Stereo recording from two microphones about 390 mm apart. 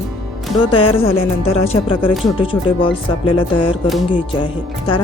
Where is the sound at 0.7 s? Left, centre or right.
Centre.